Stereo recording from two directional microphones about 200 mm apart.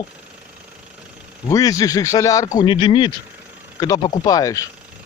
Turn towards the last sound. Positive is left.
turn(degrees=15)  # may be behind; listen again after turning